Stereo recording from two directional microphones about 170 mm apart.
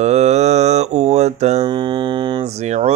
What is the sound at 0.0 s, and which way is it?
Mantra, 40° right (ahead or behind).